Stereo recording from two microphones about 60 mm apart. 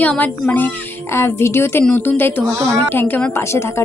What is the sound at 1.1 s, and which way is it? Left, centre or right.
A woman's voice, left.